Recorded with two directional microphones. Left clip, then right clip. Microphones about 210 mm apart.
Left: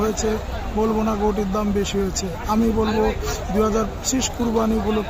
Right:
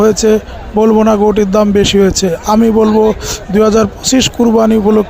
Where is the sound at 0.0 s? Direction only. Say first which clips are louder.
Right 13 dB; 40° right (ahead or behind).